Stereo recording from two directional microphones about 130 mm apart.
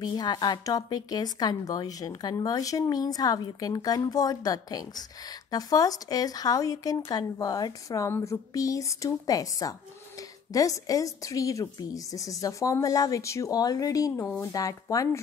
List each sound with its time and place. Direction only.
0.0 s a woman's voice: 30° left (ahead or behind)
14.2 s a woman's voice: 10° left (ahead or behind)
14.5 s a woman's voice: 25° left (ahead or behind)